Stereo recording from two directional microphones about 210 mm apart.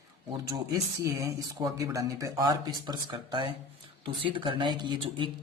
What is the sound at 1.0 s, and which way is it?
Speech, 15° right (ahead or behind).